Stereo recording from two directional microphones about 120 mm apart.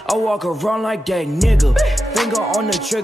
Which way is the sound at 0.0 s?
Centre (ahead or behind).